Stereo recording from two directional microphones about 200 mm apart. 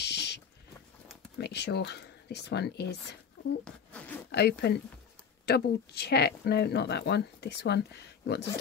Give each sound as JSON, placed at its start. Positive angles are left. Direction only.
{"t": 0.0, "sound": "a sound", "side_deg": 55}
{"t": 1.4, "sound": "speech", "side_deg": 55}
{"t": 3.6, "sound": "zipper", "side_deg": 5}
{"t": 4.3, "sound": "speech", "side_deg": 55}